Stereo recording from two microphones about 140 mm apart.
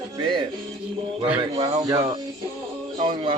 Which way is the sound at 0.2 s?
35° right (ahead or behind).